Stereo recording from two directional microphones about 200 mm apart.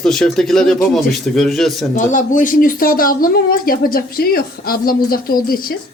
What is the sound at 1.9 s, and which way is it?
Speech, 40° left (ahead or behind).